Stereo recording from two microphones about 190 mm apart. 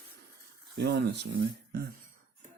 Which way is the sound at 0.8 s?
60° right (ahead or behind).